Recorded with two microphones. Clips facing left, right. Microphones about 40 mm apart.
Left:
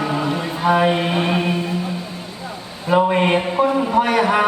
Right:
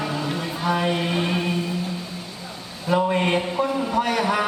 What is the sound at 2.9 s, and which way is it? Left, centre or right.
Speech, left.